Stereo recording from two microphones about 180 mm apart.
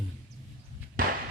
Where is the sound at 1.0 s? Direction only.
50° right (ahead or behind).